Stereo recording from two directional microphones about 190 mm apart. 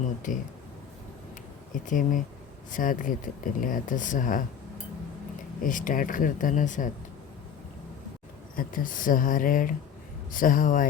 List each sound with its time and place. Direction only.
0.3 s speech: 40° left (ahead or behind)
1.7 s speech: 45° left (ahead or behind)
5.6 s speech: 45° left (ahead or behind)
8.5 s speech: 45° left (ahead or behind)